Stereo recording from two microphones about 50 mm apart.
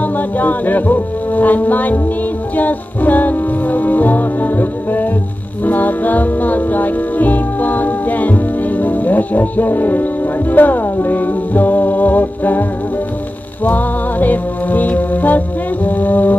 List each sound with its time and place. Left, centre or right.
0.0 s music: left
13.7 s music: left